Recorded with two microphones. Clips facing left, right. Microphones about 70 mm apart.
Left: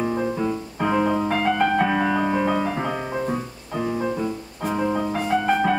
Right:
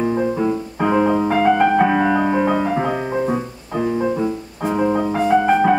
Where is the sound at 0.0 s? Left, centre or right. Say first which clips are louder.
Right 5 dB; centre.